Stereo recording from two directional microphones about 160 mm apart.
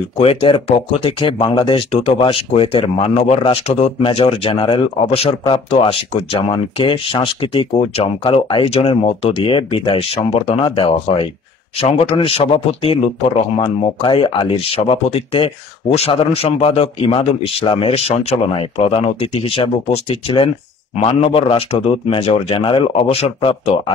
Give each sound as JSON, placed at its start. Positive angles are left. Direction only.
{"t": 0.2, "sound": "speech", "side_deg": 35}